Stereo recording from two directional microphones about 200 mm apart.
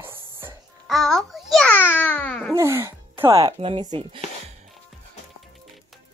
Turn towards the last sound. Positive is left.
turn(degrees=-25)  # may be behind; listen again after turning